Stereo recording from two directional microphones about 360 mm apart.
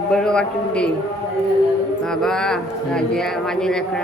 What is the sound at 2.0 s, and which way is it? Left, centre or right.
Speech, centre.